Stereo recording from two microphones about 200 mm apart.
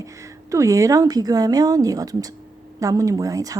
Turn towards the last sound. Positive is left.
turn(degrees=-15)  # may be behind; listen again after turning